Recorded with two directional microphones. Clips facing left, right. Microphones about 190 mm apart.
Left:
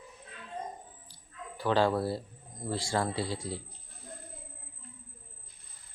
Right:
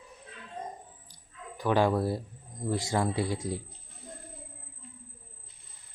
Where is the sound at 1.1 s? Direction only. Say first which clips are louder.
Even; 15° right (ahead or behind).